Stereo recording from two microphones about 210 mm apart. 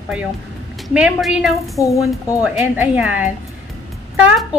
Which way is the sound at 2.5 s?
5° right (ahead or behind).